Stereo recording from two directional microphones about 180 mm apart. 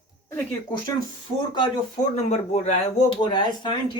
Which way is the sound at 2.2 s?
40° left (ahead or behind).